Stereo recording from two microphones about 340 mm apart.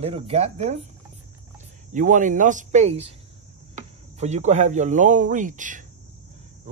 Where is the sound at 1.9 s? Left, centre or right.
Right.